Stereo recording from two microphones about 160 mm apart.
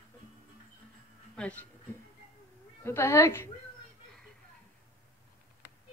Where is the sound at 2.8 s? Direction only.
15° left (ahead or behind).